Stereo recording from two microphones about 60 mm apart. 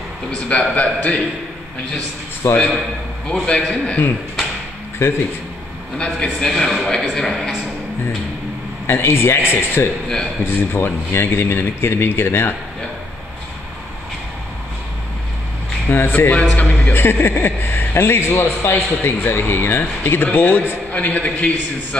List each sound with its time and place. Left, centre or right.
0.5 s a man's voice: centre
2.4 s a man's voice: left
3.4 s a man's voice: centre
5.0 s a man's voice: left
5.9 s a man's voice: centre
8.8 s a man's voice: left
15.9 s a man's voice: left
16.5 s a man's voice: left
16.9 s a man's voice: left